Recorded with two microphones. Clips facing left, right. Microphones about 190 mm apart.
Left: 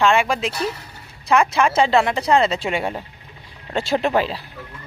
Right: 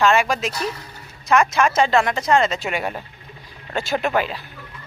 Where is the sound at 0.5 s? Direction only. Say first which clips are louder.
Left 2 dB; 30° left (ahead or behind).